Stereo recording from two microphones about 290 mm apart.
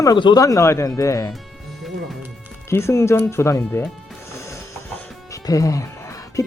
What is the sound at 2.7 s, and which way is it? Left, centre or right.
Speech, centre.